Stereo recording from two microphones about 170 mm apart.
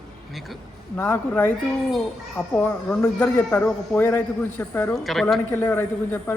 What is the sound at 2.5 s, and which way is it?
A man's voice, 10° left (ahead or behind).